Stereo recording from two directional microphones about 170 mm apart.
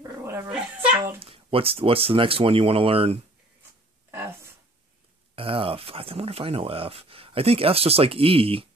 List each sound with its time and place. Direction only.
0.0 s dog: 15° right (ahead or behind)
1.2 s speech: 35° right (ahead or behind)
5.3 s speech: 30° right (ahead or behind)